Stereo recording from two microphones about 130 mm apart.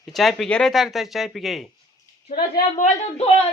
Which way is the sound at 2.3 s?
80° left.